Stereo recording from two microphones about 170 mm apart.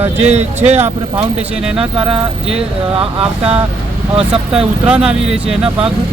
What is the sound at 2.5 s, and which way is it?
Speech, 35° right (ahead or behind).